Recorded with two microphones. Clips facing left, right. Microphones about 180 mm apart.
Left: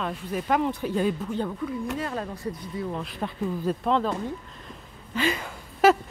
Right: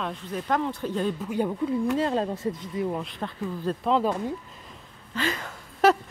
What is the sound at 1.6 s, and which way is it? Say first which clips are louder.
Speech: right 5 dB; 30° right (ahead or behind).